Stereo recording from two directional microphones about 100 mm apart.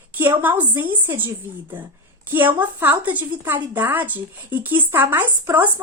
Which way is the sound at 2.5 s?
20° right (ahead or behind).